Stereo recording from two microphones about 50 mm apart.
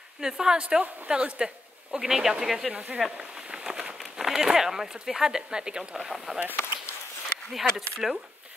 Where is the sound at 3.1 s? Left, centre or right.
Centre.